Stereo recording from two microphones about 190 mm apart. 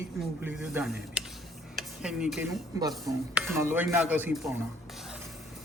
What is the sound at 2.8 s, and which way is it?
Speech, 20° right (ahead or behind).